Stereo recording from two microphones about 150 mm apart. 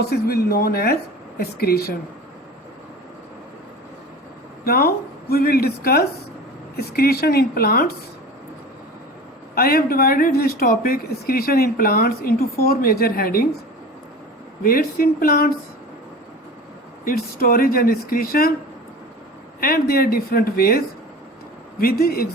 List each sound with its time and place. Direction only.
0.1 s speech: 90° left
4.6 s speech: 90° left
9.6 s speech: 80° left
14.6 s speech: 75° left (ahead or behind); by 15.4 s 90° left
17.1 s speech: 80° left
19.5 s speech: 80° left